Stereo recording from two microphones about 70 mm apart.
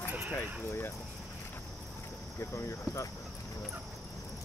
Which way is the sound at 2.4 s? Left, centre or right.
Left.